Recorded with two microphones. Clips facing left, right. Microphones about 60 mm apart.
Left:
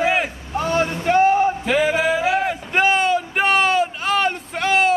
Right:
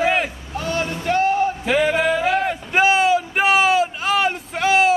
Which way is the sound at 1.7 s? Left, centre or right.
Centre.